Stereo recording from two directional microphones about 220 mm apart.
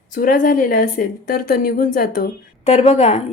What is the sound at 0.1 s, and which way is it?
A woman's voice, 40° left (ahead or behind).